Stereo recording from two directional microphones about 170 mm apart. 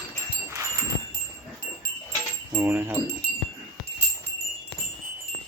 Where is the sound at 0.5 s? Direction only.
15° right (ahead or behind).